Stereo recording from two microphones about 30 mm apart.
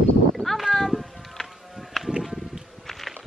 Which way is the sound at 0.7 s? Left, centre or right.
Centre.